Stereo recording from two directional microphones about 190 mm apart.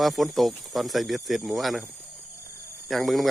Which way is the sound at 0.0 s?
Centre (ahead or behind).